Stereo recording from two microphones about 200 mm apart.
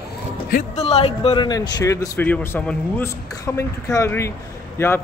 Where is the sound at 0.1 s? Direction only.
50° left (ahead or behind).